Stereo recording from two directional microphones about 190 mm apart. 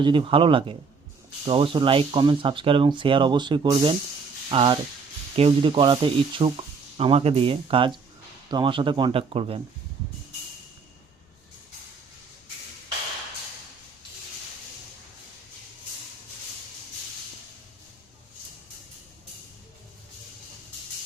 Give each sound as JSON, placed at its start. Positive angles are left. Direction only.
{"t": 0.0, "sound": "speech", "side_deg": -25}